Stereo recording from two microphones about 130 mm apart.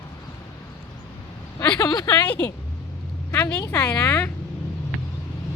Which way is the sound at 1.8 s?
30° left (ahead or behind).